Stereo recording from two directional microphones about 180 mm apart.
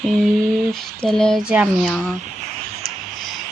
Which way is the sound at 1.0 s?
5° left (ahead or behind).